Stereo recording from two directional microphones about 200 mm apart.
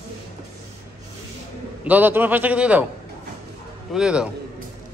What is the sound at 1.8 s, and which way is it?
A man's voice, 10° right (ahead or behind).